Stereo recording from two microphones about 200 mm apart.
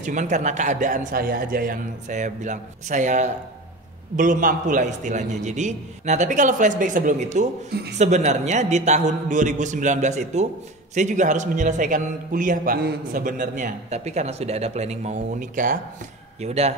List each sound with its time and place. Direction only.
0.0 s a man's voice: 40° right (ahead or behind)